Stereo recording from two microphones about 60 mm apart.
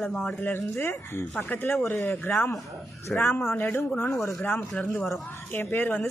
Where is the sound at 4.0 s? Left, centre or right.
Left.